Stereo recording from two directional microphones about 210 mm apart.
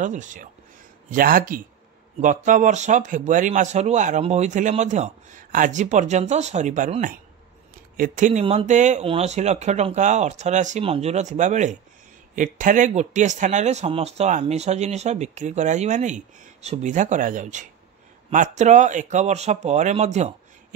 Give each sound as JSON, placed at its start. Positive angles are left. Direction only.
{"t": 0.0, "sound": "speech", "side_deg": -35}